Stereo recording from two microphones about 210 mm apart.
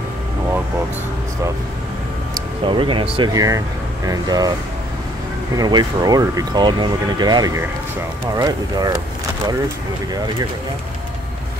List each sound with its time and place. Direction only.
2.6 s speech: 25° right (ahead or behind)
5.6 s speech: 20° right (ahead or behind)